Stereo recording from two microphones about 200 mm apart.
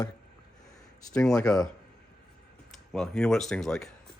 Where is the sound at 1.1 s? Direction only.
5° left (ahead or behind).